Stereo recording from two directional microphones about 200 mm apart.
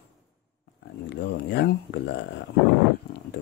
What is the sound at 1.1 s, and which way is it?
Speech, 60° left (ahead or behind).